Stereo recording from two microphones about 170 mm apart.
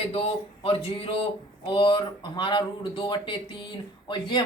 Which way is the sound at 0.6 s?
35° left (ahead or behind).